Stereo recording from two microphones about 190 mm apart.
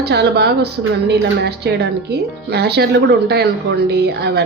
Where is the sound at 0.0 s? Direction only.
60° right (ahead or behind).